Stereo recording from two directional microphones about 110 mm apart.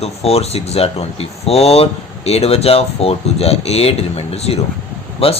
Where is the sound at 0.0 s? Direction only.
70° left (ahead or behind).